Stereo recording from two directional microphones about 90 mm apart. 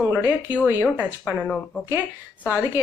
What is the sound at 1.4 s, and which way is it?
Speech, 5° left (ahead or behind).